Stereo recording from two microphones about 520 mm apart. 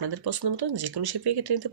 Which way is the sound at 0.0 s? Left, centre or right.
Right.